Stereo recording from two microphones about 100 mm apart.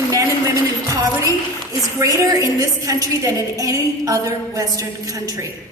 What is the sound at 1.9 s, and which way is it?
A woman's voice, 35° right (ahead or behind).